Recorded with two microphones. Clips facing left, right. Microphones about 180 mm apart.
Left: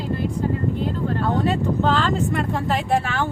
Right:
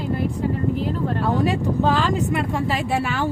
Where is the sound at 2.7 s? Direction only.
50° left (ahead or behind).